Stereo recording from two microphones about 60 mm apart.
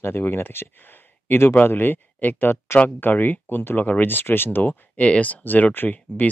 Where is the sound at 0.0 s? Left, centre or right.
Left.